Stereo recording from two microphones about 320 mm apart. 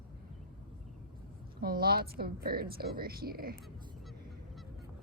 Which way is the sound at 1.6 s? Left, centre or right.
Right.